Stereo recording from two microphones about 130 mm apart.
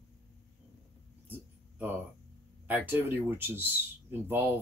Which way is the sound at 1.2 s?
15° right (ahead or behind).